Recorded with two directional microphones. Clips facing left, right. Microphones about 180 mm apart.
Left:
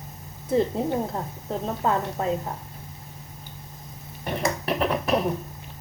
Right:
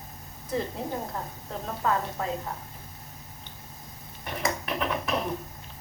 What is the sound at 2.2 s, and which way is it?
Speech, 30° left (ahead or behind).